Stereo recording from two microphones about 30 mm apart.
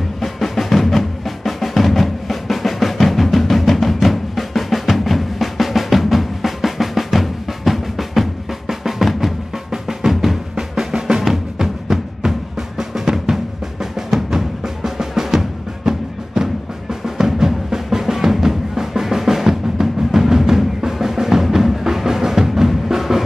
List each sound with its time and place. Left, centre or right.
0.2 s music: centre
1.9 s drum: centre
10.5 s drum: right
13.9 s music: centre